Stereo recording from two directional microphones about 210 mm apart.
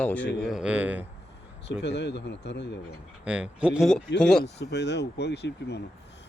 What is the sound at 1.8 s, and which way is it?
Speech, 55° left (ahead or behind).